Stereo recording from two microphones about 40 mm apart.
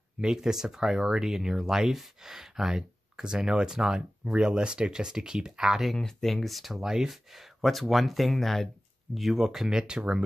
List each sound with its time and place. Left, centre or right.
0.2 s speech: centre
5.9 s speech: centre; by 10.2 s right